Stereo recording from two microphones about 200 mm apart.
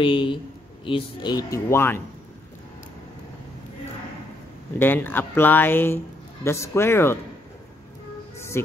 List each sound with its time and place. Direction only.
0.0 s speech: 25° left (ahead or behind)
4.7 s speech: 10° left (ahead or behind)
8.4 s music: 15° left (ahead or behind)